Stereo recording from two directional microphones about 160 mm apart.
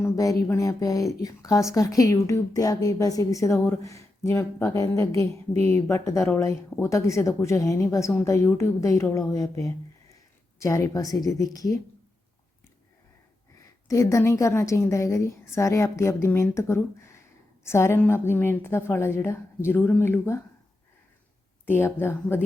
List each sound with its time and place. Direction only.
0.0 s speech: 20° left (ahead or behind)
13.8 s a woman's voice: 20° left (ahead or behind)
21.7 s a woman's voice: 15° left (ahead or behind)